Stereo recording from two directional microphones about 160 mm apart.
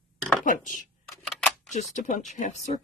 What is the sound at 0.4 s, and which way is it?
Speech, 55° left (ahead or behind).